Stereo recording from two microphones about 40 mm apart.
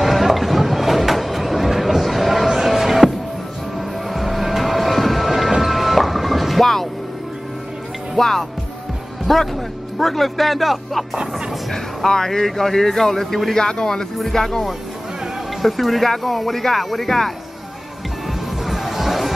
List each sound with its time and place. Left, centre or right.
0.0 s a sound: centre
4.1 s music: centre
8.2 s music: centre
9.9 s speech: centre
11.7 s speech: centre
14.1 s speech: centre
15.6 s speech: centre
18.7 s music: centre